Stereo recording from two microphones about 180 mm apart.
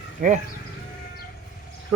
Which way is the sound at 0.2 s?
50° right (ahead or behind).